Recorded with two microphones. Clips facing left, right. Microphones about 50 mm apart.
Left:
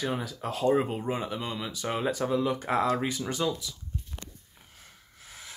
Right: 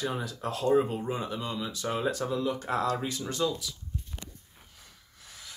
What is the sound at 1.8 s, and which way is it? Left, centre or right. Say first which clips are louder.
Speech: left 2 dB; left.